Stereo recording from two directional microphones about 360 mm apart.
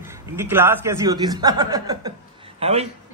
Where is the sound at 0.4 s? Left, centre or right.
Centre.